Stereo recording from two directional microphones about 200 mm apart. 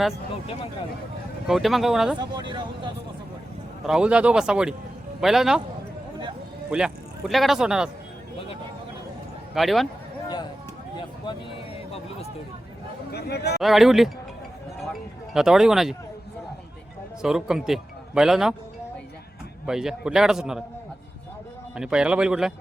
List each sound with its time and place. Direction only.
1.5 s speech: centre (ahead or behind)
2.1 s speech: 20° right (ahead or behind)
3.8 s speech: 5° right (ahead or behind)
6.7 s a man's voice: 5° right (ahead or behind)
9.6 s speech: centre (ahead or behind)
13.1 s speech: 55° left (ahead or behind)
13.6 s speech: centre (ahead or behind)
17.2 s speech: centre (ahead or behind)
19.6 s speech: 5° right (ahead or behind)
21.8 s speech: 5° right (ahead or behind)